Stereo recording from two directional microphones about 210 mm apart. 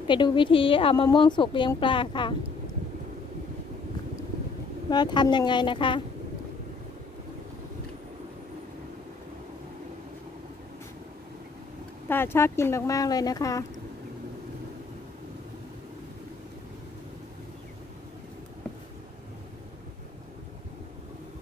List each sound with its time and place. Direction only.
0.1 s speech: 20° left (ahead or behind)
4.8 s speech: 20° left (ahead or behind)
12.1 s speech: 10° left (ahead or behind)